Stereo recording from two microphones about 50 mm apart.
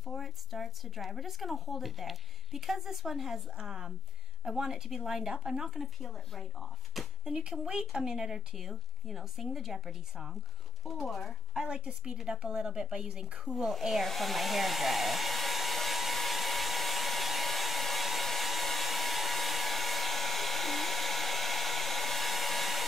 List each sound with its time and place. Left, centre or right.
0.0 s a woman's voice: centre
6.9 s a sound: centre
7.5 s a woman's voice: centre
11.7 s a woman's voice: centre
13.7 s hair dryer: centre